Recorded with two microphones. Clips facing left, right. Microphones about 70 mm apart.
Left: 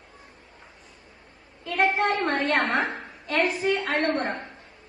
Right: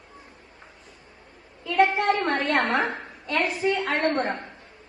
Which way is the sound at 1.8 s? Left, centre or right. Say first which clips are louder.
Right 2 dB; right.